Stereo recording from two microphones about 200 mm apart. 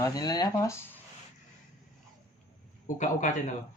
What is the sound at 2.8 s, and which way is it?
Speech, 40° left (ahead or behind).